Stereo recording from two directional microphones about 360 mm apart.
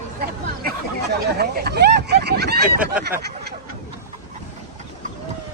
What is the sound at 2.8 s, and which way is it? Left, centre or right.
Speech, centre.